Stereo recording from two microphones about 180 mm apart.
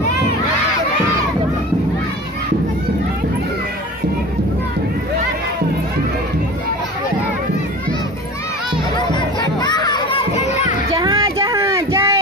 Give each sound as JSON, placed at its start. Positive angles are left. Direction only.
{"t": 9.1, "sound": "music", "side_deg": 25}
{"t": 11.0, "sound": "child singing", "side_deg": -20}